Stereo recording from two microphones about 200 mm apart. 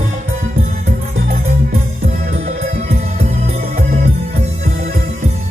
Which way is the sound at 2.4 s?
35° right (ahead or behind).